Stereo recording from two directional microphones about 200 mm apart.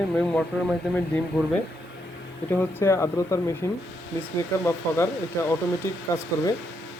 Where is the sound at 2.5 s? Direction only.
15° left (ahead or behind).